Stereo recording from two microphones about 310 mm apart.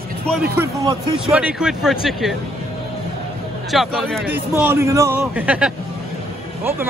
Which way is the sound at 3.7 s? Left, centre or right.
Centre.